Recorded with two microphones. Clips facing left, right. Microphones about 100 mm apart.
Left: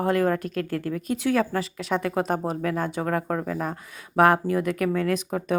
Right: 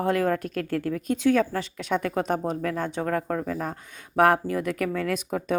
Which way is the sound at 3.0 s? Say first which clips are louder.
Left 1 dB; 35° left (ahead or behind).